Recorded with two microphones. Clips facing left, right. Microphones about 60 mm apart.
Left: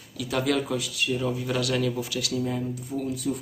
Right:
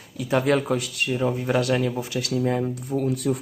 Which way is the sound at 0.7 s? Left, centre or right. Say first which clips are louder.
Right 3 dB; right.